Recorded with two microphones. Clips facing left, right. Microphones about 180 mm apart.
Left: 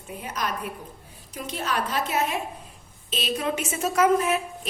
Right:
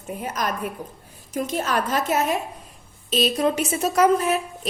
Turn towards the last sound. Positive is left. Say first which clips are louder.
# right 2 dB
turn(degrees=-35)  # may be behind; listen again after turning